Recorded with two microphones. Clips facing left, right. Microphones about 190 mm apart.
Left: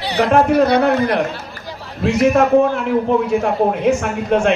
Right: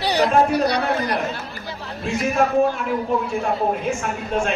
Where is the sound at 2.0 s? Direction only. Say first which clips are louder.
Left 7 dB; 75° left (ahead or behind).